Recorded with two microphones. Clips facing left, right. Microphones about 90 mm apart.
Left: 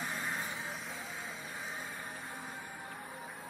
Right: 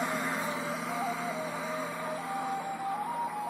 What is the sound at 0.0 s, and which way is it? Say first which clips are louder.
Vehicle: right 7 dB; 90° right.